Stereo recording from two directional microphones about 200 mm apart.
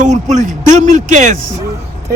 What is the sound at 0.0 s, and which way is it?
A man's voice, 40° right (ahead or behind).